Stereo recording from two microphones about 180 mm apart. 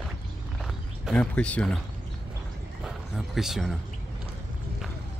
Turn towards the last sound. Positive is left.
turn(degrees=0)  # may be behind; listen again after turning